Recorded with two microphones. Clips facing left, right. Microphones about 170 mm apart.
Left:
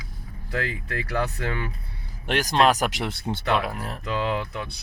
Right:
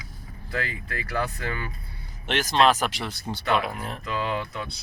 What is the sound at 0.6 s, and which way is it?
Speech, 70° left (ahead or behind).